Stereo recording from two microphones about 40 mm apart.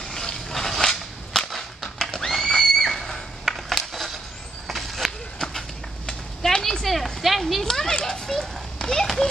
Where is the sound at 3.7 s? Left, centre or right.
Centre.